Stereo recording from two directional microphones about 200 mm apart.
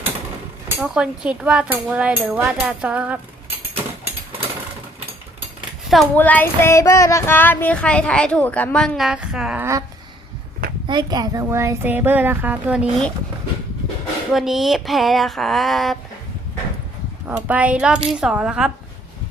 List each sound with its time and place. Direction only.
0.8 s cutlery: 5° right (ahead or behind)
6.1 s a sound: 10° left (ahead or behind); by 9.8 s 10° right (ahead or behind)
10.8 s speech: 20° right (ahead or behind); by 13.1 s 5° right (ahead or behind)
14.3 s cutlery: centre (ahead or behind)
17.2 s speech: 10° right (ahead or behind)
18.1 s cutlery: 5° right (ahead or behind)